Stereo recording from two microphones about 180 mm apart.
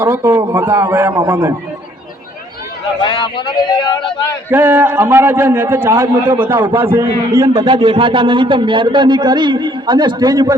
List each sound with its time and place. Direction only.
0.0 s a man's voice: 10° right (ahead or behind)
3.0 s speech: 25° left (ahead or behind)
4.5 s a man's voice: 10° right (ahead or behind)